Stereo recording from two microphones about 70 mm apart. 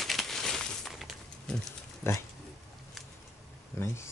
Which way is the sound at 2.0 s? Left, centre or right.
Left.